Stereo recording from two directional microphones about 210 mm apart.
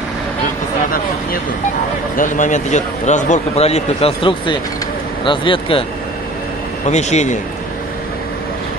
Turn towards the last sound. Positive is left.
turn(degrees=35)  # may be behind; listen again after turning